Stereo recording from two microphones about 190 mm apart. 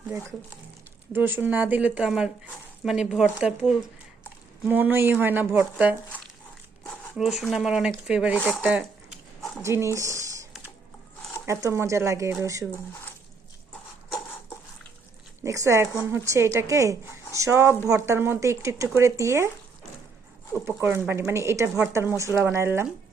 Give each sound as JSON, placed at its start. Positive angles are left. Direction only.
{"t": 1.1, "sound": "speech", "side_deg": -10}
{"t": 6.8, "sound": "speech", "side_deg": 0}
{"t": 8.6, "sound": "a sound", "side_deg": -5}
{"t": 9.6, "sound": "speech", "side_deg": -15}
{"t": 11.4, "sound": "speech", "side_deg": -15}
{"t": 15.4, "sound": "speech", "side_deg": -15}
{"t": 20.7, "sound": "speech", "side_deg": -15}